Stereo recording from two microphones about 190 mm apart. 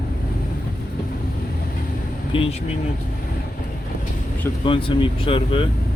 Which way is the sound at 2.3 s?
30° left (ahead or behind).